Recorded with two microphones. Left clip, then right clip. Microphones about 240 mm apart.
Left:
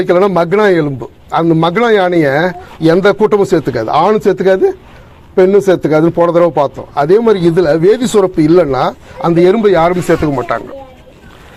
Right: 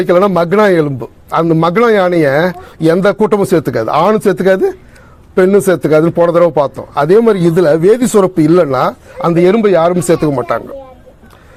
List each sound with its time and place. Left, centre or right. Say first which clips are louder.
0.0 s a man's voice: even; right